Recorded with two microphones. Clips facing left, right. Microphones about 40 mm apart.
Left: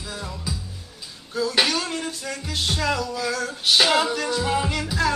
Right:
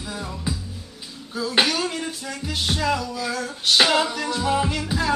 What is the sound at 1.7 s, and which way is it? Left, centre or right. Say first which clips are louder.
Music: right 1 dB; centre.